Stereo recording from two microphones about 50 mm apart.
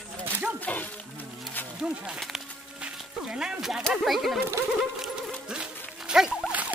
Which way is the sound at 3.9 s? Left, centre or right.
Centre.